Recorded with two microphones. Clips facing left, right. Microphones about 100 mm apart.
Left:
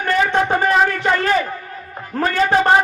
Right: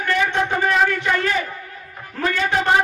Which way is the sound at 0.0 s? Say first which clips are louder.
Left 3 dB; 40° left (ahead or behind).